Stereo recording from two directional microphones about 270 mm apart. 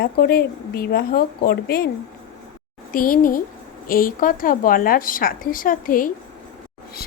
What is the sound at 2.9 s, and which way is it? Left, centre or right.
A woman's voice, left.